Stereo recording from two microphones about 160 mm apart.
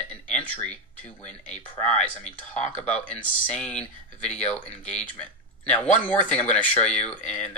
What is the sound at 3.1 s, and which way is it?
Speech, 5° left (ahead or behind).